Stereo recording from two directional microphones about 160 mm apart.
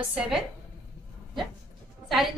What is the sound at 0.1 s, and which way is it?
Speech, 5° right (ahead or behind).